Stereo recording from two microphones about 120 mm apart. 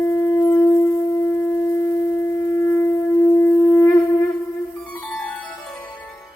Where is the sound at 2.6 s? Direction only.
20° left (ahead or behind).